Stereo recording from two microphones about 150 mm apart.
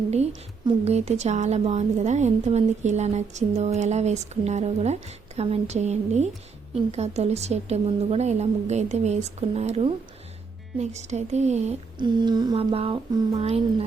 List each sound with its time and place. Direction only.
0.9 s a woman's voice: 45° right (ahead or behind)
11.9 s a sound: 30° right (ahead or behind)
12.7 s speech: 40° right (ahead or behind)